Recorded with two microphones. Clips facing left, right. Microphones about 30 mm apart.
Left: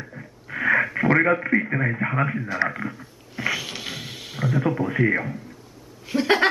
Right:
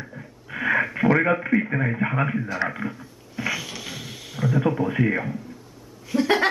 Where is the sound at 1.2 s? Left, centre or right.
Centre.